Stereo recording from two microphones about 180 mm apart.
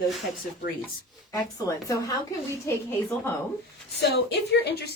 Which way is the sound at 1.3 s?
20° left (ahead or behind).